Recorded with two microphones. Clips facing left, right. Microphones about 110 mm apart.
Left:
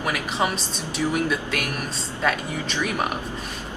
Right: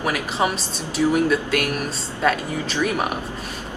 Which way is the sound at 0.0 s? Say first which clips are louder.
Right 2 dB; centre (ahead or behind).